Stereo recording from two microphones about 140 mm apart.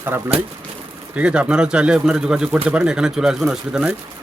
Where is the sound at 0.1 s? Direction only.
15° right (ahead or behind).